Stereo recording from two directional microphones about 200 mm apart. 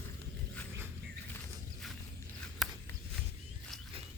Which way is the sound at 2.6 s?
Centre (ahead or behind).